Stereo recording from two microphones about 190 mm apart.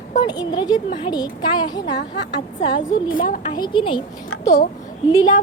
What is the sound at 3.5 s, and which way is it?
Speech, 25° left (ahead or behind).